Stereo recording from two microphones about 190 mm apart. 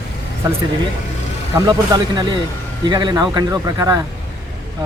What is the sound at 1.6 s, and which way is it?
Speech, 20° right (ahead or behind).